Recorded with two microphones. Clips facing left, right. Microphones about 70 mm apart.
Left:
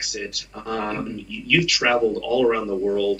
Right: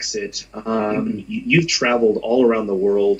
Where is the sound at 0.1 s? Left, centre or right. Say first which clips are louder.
Right 9 dB; centre.